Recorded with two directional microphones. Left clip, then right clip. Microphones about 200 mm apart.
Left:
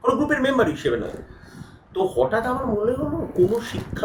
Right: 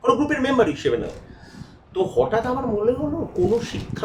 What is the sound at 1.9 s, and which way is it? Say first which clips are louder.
Speech: right 1 dB; 5° right (ahead or behind).